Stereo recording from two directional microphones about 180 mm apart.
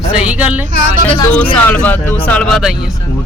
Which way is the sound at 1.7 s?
10° left (ahead or behind).